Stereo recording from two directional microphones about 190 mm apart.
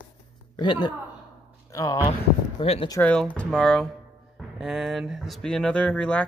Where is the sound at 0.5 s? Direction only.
25° left (ahead or behind).